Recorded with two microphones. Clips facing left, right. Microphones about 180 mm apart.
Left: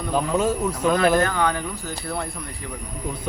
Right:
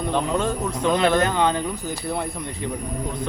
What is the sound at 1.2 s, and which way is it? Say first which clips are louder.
Speech: right 2 dB; 20° right (ahead or behind).